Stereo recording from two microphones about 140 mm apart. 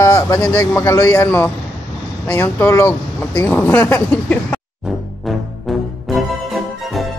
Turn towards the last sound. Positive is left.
turn(degrees=0)  # may be behind; listen again after turning